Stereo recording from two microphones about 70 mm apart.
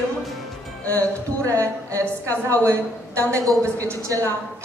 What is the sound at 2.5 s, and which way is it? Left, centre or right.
A man's voice, right.